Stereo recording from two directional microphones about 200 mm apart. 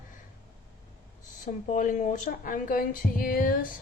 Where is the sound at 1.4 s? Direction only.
40° left (ahead or behind).